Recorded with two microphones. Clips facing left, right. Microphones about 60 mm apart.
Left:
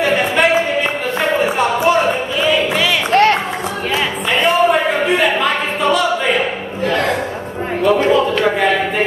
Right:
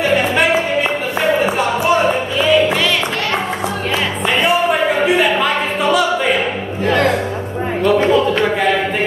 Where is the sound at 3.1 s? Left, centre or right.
Left.